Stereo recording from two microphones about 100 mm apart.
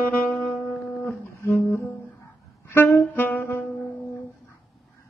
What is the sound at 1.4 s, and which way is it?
Music, 25° left (ahead or behind).